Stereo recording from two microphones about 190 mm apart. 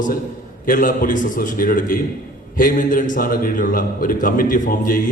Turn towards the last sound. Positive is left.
turn(degrees=45)  # may be behind; listen again after turning